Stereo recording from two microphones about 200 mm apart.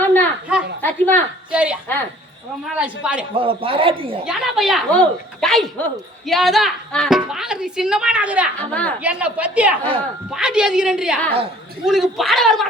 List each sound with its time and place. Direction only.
0.0 s a sound: 10° left (ahead or behind)
0.8 s a woman's voice: 10° left (ahead or behind)
1.5 s a woman's voice: 5° right (ahead or behind)
3.3 s a man's voice: 25° right (ahead or behind)
4.3 s a woman's voice: centre (ahead or behind)
8.5 s a woman's voice: 5° left (ahead or behind)
9.0 s a woman's voice: 5° right (ahead or behind)